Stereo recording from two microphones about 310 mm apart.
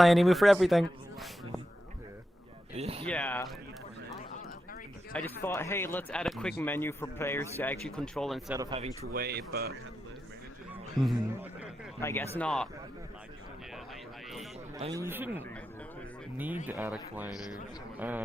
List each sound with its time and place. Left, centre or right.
0.0 s a man's voice: centre
2.7 s speech: centre
3.1 s speech: centre
5.4 s speech: centre
8.5 s speech: centre
9.0 s speech: right
10.9 s a man's voice: centre
11.9 s speech: centre
14.8 s speech: centre
16.6 s a man's voice: centre